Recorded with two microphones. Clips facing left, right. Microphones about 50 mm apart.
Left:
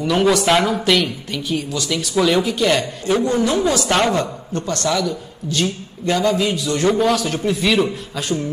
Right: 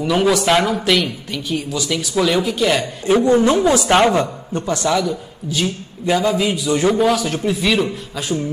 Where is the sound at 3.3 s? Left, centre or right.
Right.